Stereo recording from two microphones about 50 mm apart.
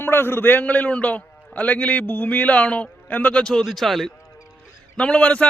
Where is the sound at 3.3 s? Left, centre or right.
Centre.